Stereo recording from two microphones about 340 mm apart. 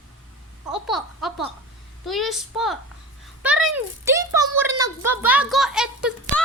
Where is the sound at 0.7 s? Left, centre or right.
Centre.